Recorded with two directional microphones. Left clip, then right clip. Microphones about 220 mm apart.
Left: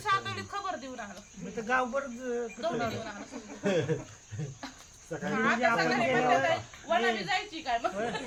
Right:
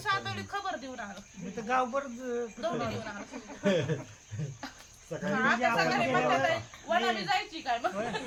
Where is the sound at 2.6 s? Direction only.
Centre (ahead or behind).